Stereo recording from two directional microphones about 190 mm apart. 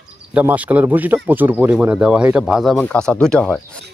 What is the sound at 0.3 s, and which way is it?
Speech, 5° right (ahead or behind).